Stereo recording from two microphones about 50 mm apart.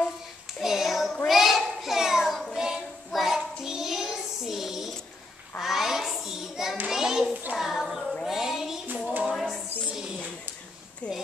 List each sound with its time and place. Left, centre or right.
0.6 s child singing: centre
1.2 s children playing: centre
2.5 s child singing: centre
6.9 s hands: centre
7.5 s child singing: centre
9.2 s a sound: centre
11.0 s a sound: left